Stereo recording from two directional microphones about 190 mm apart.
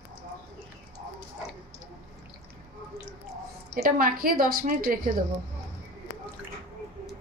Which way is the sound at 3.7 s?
50° right (ahead or behind).